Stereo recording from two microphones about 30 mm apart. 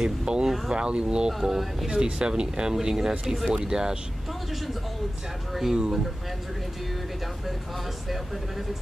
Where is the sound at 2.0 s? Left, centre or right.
Right.